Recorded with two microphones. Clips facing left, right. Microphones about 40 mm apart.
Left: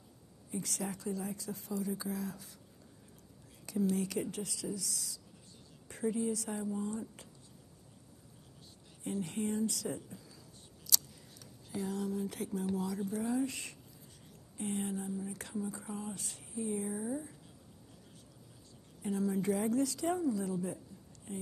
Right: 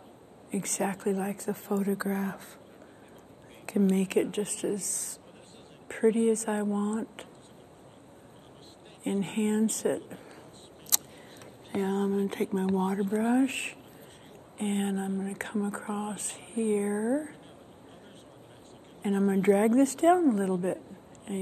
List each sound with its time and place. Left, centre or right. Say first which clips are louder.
0.5 s speech: right 8 dB; right
3.6 s speech: right 7 dB; right
9.0 s speech: right 8 dB; right
10.9 s a sound: right 1 dB; right
11.7 s speech: right 9 dB; right
19.0 s speech: right 9 dB; right